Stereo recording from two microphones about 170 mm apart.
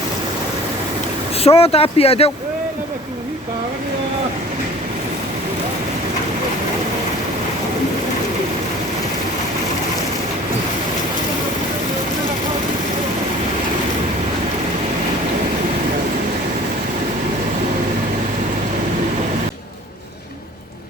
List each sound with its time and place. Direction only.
1.5 s speech: 35° left (ahead or behind)